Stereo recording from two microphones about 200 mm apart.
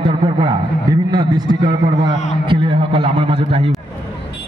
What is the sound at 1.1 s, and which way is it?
A man's voice, 20° right (ahead or behind).